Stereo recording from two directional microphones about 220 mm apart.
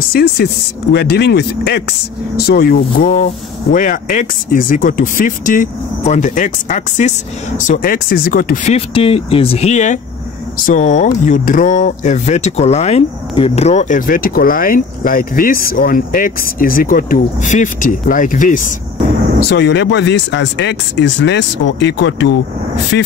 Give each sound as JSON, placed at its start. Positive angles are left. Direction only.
{"t": 0.1, "sound": "speech", "side_deg": 45}
{"t": 8.7, "sound": "speech", "side_deg": 25}
{"t": 19.5, "sound": "speech", "side_deg": 55}